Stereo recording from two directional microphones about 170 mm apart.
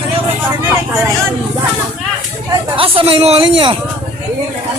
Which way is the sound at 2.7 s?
30° right (ahead or behind).